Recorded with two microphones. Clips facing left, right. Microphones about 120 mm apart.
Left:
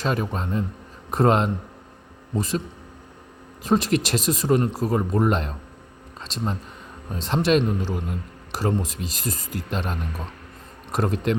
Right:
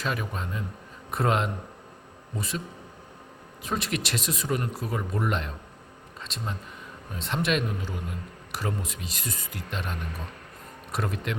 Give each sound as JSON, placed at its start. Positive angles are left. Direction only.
{"t": 0.0, "sound": "speech", "side_deg": 35}
{"t": 3.6, "sound": "speech", "side_deg": 35}